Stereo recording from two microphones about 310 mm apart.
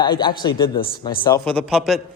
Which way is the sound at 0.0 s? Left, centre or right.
Centre.